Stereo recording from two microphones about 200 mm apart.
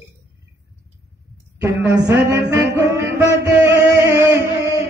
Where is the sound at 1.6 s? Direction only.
10° right (ahead or behind).